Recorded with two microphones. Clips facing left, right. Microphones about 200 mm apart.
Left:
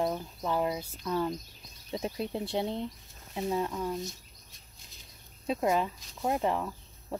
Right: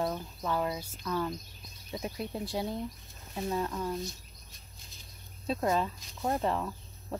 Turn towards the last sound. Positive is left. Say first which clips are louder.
# left 1 dB
turn(degrees=10)  # may be behind; listen again after turning